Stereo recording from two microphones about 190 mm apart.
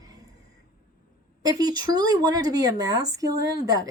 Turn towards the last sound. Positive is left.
turn(degrees=-20)  # may be behind; listen again after turning